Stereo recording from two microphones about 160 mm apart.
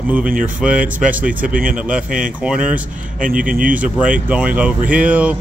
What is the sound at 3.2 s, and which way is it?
Speech, 60° right (ahead or behind).